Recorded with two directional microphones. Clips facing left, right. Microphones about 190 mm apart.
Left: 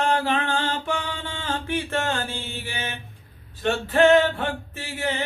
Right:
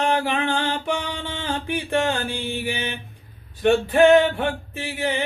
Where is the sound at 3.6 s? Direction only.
15° right (ahead or behind).